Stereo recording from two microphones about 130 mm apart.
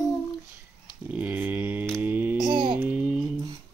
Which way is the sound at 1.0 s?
10° right (ahead or behind).